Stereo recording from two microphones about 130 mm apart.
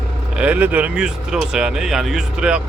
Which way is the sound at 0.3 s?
10° right (ahead or behind).